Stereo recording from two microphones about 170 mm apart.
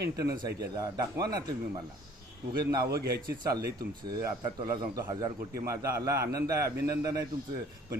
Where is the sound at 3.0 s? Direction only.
20° right (ahead or behind).